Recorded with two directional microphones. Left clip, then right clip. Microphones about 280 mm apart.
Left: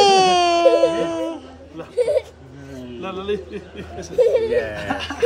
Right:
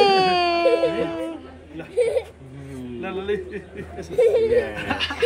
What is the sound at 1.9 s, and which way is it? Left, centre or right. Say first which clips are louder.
Speech: left 2 dB; left.